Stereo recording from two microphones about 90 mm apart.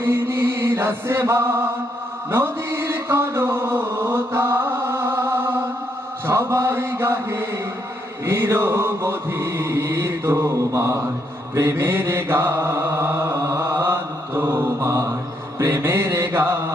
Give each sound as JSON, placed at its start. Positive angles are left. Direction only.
{"t": 0.0, "sound": "chant", "side_deg": -25}
{"t": 8.2, "sound": "mantra", "side_deg": -25}